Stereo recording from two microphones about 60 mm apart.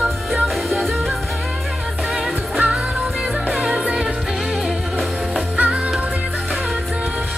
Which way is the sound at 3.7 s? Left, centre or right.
Centre.